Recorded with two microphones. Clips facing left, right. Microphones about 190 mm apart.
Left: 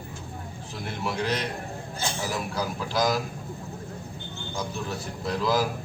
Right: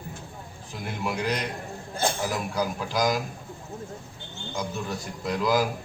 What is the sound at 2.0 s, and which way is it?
Speech, 55° right (ahead or behind).